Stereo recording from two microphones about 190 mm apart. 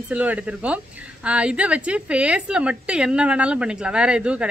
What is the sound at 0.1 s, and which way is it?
A woman's voice, 5° right (ahead or behind).